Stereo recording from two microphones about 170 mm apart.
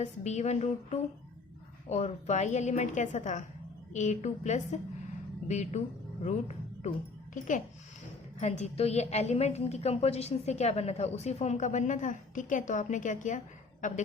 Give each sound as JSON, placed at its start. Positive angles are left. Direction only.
{"t": 0.0, "sound": "a woman's voice", "side_deg": 45}
{"t": 8.4, "sound": "a woman's voice", "side_deg": 40}